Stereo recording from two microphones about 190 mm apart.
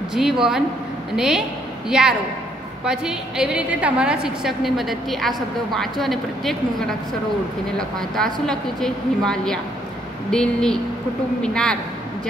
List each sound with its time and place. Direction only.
0.1 s a woman's voice: centre (ahead or behind)
8.2 s a woman's voice: 5° left (ahead or behind)